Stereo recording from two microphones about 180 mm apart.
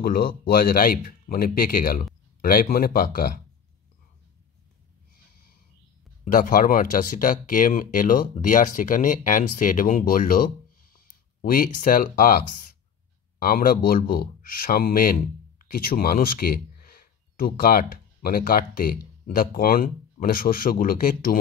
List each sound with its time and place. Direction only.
0.0 s speech: 55° left (ahead or behind)
6.2 s speech: 50° left (ahead or behind)